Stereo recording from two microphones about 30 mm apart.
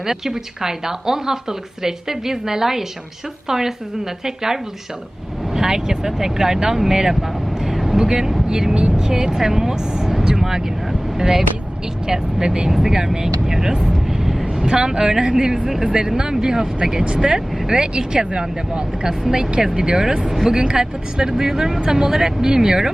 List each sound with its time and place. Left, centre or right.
0.0 s a woman's voice: centre
5.5 s a woman's voice: centre
13.8 s vehicle: centre
14.6 s speech: right
20.2 s a woman's voice: centre
20.5 s a woman's voice: right